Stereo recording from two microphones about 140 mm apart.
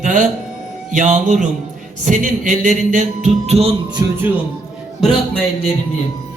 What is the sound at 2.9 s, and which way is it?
Music, 55° right (ahead or behind).